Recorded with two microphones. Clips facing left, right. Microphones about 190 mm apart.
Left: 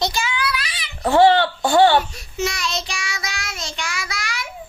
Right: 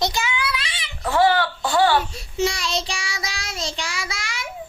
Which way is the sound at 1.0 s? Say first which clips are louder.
Left 5 dB; 25° left (ahead or behind).